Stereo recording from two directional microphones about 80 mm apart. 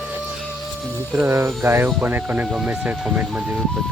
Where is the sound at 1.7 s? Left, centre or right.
Right.